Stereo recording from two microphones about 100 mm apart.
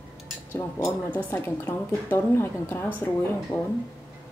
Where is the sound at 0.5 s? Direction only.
20° left (ahead or behind).